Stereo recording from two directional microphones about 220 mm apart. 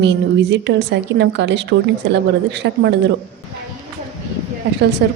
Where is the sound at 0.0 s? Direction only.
55° right (ahead or behind).